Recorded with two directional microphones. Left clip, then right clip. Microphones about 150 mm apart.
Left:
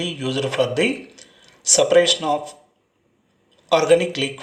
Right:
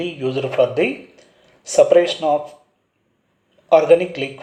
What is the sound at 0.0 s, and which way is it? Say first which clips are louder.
Speech: right 2 dB; 20° right (ahead or behind).